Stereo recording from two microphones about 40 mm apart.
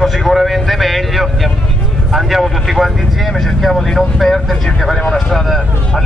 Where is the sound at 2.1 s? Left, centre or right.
Centre.